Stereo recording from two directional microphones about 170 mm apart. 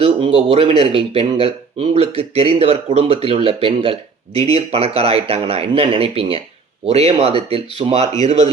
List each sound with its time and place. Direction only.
0.0 s speech: 35° right (ahead or behind)